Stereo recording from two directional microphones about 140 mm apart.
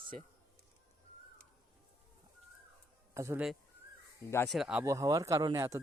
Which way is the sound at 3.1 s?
20° right (ahead or behind).